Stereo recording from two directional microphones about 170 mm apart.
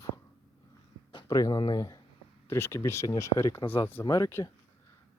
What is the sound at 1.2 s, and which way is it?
Speech, 20° left (ahead or behind).